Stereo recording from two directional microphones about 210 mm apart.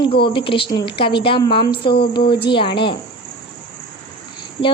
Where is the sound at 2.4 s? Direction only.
25° left (ahead or behind).